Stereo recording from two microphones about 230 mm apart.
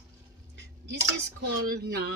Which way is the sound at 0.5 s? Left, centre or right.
Right.